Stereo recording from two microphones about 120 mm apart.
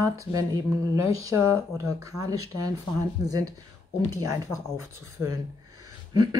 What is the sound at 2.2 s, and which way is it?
Speech, 30° right (ahead or behind).